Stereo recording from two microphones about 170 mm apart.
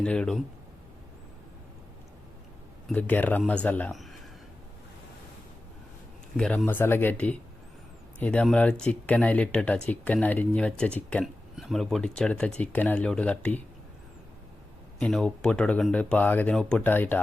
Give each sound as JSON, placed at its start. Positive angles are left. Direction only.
{"t": 0.0, "sound": "speech", "side_deg": 5}
{"t": 2.9, "sound": "speech", "side_deg": 10}
{"t": 6.3, "sound": "speech", "side_deg": 5}
{"t": 14.9, "sound": "speech", "side_deg": 5}